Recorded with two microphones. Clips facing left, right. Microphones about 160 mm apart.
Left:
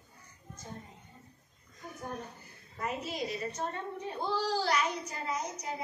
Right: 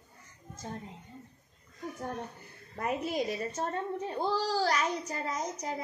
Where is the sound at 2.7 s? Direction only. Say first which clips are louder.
Right 5 dB; 55° right (ahead or behind).